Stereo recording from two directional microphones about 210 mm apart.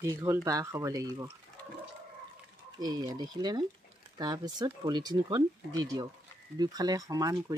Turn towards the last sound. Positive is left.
turn(degrees=-15)  # may be behind; listen again after turning